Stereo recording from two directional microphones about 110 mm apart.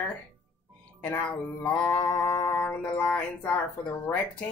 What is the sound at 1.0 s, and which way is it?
Music, 20° left (ahead or behind).